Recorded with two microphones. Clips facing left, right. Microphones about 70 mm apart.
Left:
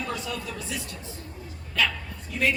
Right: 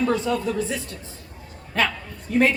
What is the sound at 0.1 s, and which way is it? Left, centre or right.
A woman's voice, right.